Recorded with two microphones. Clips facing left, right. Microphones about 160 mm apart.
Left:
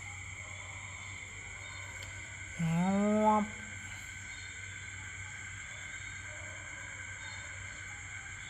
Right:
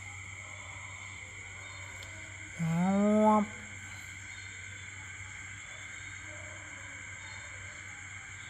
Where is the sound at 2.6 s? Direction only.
15° left (ahead or behind).